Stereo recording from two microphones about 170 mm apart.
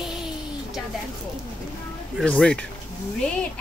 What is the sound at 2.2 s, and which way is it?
Speech, 5° left (ahead or behind).